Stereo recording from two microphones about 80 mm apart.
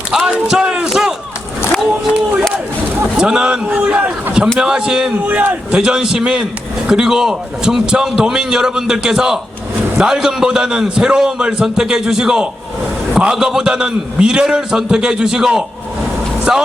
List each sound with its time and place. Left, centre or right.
0.1 s a man's voice: centre
3.2 s a man's voice: centre